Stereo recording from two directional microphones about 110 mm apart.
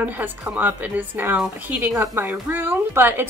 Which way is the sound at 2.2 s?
20° right (ahead or behind).